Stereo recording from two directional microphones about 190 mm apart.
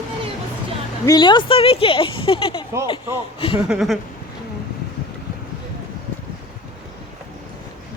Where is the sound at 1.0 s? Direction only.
20° left (ahead or behind).